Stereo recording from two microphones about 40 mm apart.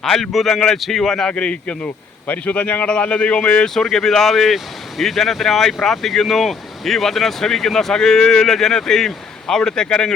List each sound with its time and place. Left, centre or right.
0.0 s speech: centre
1.3 s speech: left
3.8 s speech: centre